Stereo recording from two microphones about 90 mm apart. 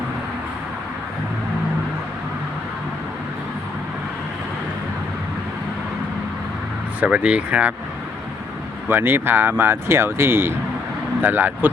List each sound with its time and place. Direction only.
7.0 s speech: 10° right (ahead or behind)
8.9 s speech: 25° right (ahead or behind)